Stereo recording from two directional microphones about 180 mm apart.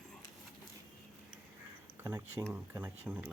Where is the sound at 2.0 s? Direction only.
15° right (ahead or behind).